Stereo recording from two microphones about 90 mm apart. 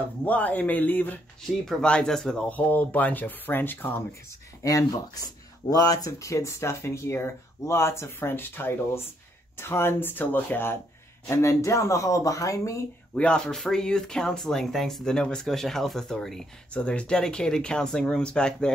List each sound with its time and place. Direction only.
0.2 s speech: 15° left (ahead or behind)
1.4 s speech: 5° left (ahead or behind); by 4.0 s 20° left (ahead or behind)
4.6 s speech: 40° left (ahead or behind); by 10.8 s 20° left (ahead or behind)
11.2 s speech: 35° left (ahead or behind)
13.1 s speech: 10° left (ahead or behind)